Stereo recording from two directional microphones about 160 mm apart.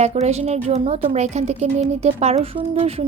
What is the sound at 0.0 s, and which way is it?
Speech, 45° right (ahead or behind).